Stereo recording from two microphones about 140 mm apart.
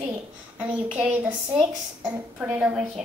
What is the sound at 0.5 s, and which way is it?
A woman's voice, 10° right (ahead or behind).